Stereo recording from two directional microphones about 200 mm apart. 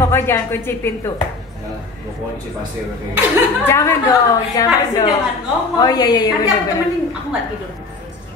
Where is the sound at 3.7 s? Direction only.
15° left (ahead or behind).